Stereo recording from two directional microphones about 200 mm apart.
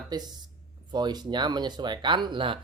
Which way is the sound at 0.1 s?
20° right (ahead or behind).